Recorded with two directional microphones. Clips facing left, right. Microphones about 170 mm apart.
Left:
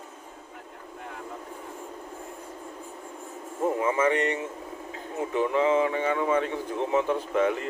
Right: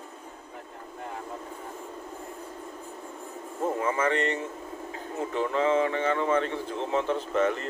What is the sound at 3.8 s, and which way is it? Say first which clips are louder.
Speech: left 2 dB; 15° left (ahead or behind).